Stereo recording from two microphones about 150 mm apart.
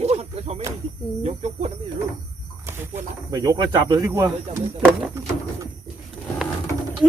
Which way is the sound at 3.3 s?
25° right (ahead or behind).